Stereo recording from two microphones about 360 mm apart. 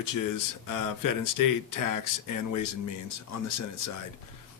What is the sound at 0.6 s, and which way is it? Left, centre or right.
Speech, left.